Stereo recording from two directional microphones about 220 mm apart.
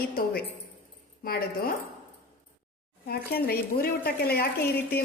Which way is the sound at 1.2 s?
40° left (ahead or behind).